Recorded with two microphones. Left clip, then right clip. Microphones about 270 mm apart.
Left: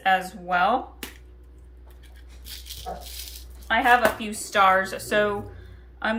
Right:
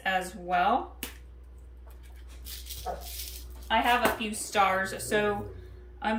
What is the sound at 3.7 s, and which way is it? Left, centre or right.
Speech, centre.